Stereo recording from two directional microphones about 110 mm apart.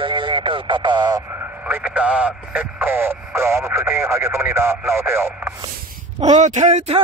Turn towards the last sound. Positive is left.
turn(degrees=-85)